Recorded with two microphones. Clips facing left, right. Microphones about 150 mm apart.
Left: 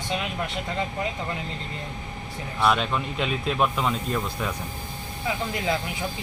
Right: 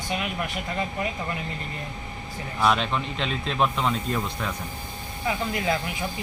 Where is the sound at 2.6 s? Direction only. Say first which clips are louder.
Even; centre (ahead or behind).